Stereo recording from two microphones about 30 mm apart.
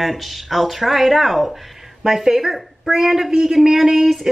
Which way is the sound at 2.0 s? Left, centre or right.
Centre.